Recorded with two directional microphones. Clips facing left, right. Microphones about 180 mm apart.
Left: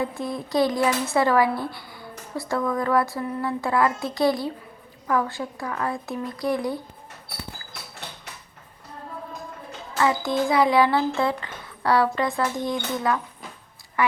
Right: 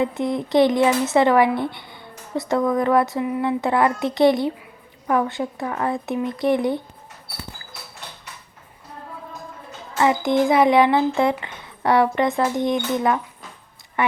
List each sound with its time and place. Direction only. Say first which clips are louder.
0.0 s a woman's voice: right 6 dB; 20° right (ahead or behind)
10.0 s a woman's voice: right 4 dB; 20° right (ahead or behind)